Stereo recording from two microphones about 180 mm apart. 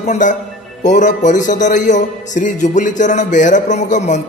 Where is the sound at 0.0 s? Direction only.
45° left (ahead or behind).